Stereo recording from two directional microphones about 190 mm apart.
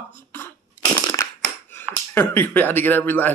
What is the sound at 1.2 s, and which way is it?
Crushing, 15° left (ahead or behind).